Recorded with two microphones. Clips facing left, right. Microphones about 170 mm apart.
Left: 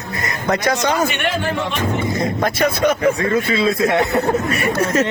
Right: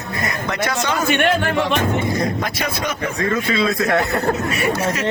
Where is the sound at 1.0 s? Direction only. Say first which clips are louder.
Right 3 dB; 55° right (ahead or behind).